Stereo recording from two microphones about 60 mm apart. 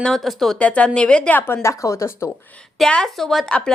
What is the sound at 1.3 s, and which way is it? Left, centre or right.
Speech, left.